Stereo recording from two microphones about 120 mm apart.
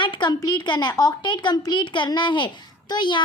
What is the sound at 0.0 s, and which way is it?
A woman's voice, 40° left (ahead or behind).